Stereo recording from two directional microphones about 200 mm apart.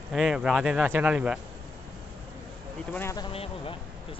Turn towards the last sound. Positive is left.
turn(degrees=30)  # may be behind; listen again after turning